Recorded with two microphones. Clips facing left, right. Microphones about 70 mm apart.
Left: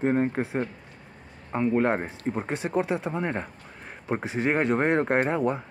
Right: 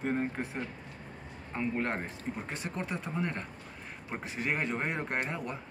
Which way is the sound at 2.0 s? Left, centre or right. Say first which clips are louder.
Left 8 dB; left.